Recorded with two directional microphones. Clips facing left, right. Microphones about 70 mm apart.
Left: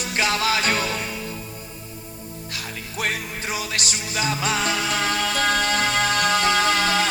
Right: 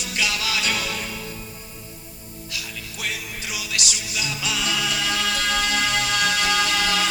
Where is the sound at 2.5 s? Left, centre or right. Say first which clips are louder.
Even; left.